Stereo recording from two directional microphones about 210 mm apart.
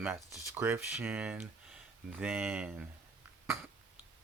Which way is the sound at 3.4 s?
10° right (ahead or behind).